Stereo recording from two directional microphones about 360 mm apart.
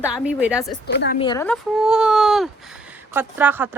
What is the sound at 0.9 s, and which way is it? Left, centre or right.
Speech, left.